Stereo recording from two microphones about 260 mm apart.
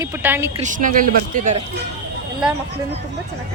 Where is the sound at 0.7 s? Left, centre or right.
Right.